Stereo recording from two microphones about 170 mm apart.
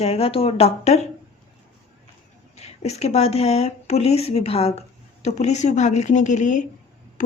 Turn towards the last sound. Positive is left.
turn(degrees=50)  # may be behind; listen again after turning